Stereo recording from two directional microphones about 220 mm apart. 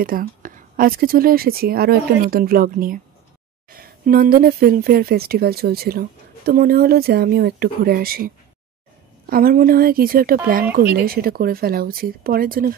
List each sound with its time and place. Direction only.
0.0 s speech: 40° right (ahead or behind)
9.3 s speech: 40° right (ahead or behind)